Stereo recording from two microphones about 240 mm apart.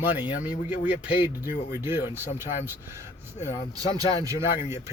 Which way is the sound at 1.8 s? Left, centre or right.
Centre.